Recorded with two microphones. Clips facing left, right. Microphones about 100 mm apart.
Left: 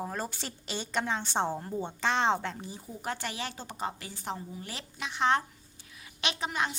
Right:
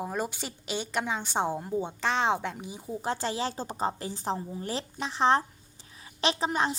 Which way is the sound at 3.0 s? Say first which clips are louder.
Right 5 dB; 30° right (ahead or behind).